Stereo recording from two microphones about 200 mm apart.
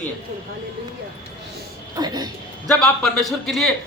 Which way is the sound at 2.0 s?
20° right (ahead or behind).